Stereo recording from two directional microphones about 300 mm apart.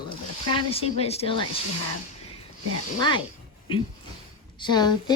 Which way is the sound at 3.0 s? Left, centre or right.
Centre.